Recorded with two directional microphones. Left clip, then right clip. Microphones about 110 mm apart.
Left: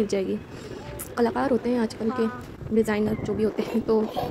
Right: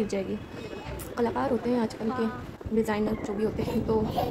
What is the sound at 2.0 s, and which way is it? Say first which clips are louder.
Speech: left 4 dB; 15° right (ahead or behind).